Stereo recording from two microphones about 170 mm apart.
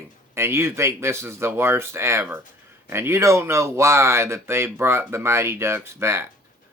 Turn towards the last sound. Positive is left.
turn(degrees=-15)  # may be behind; listen again after turning